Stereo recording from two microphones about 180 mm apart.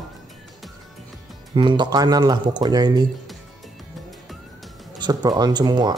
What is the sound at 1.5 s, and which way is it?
Speech, 25° right (ahead or behind).